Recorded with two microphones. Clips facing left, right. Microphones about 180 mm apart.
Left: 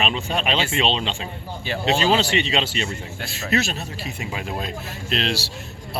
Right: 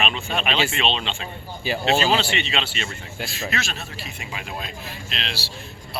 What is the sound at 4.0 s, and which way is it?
Speech, 40° left (ahead or behind).